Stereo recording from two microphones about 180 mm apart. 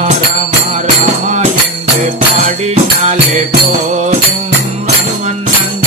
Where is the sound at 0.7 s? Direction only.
35° right (ahead or behind).